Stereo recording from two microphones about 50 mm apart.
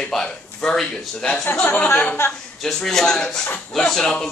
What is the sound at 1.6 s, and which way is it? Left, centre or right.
Speech, left.